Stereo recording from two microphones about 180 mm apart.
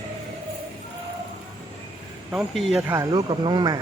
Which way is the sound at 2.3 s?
5° right (ahead or behind).